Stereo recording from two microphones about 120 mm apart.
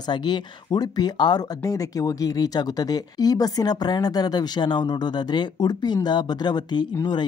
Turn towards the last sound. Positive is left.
turn(degrees=35)  # may be behind; listen again after turning